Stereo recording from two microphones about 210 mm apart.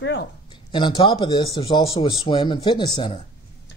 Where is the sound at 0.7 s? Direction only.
20° left (ahead or behind).